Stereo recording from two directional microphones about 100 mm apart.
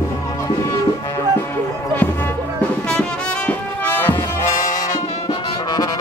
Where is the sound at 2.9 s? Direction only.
10° left (ahead or behind).